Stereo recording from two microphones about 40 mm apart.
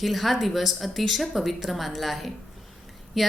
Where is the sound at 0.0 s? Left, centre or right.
Centre.